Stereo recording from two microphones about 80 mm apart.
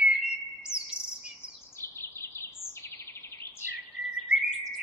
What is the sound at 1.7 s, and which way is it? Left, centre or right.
Bird, left.